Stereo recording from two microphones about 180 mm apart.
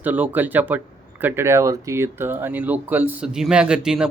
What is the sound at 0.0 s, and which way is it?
Speech, 10° right (ahead or behind).